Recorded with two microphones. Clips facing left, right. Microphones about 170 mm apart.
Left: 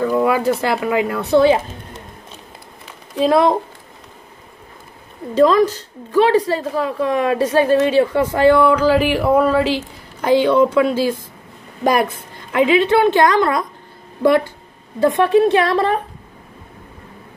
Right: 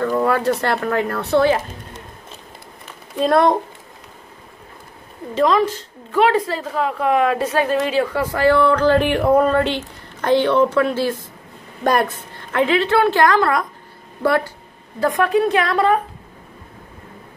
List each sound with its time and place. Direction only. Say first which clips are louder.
0.0 s speech: left 2 dB; 10° left (ahead or behind)
3.2 s speech: left 1 dB; 5° left (ahead or behind)
5.3 s a woman's voice: left 4 dB; 40° left (ahead or behind)